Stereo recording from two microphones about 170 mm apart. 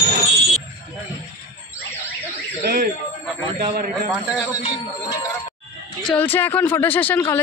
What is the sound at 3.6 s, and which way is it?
Speech, 65° right (ahead or behind).